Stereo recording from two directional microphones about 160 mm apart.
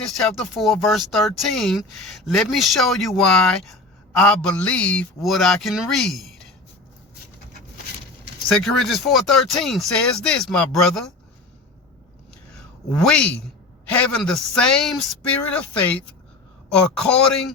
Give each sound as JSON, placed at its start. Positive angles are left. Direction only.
{"t": 0.2, "sound": "speech", "side_deg": 0}
{"t": 8.4, "sound": "speech", "side_deg": 0}
{"t": 13.0, "sound": "a man's voice", "side_deg": 5}